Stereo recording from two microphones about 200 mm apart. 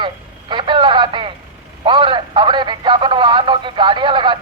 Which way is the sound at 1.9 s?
25° right (ahead or behind).